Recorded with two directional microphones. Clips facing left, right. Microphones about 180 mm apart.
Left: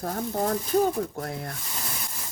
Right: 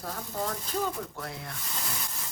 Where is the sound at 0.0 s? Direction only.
45° left (ahead or behind).